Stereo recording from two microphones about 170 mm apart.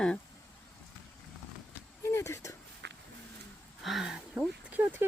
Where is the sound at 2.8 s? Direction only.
90° right.